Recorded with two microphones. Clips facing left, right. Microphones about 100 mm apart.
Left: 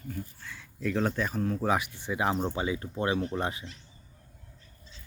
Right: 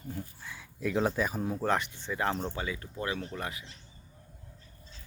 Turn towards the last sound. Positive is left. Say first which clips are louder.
# left 7 dB
turn(degrees=30)  # may be behind; listen again after turning